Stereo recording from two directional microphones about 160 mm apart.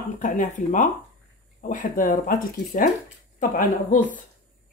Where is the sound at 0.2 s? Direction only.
50° left (ahead or behind).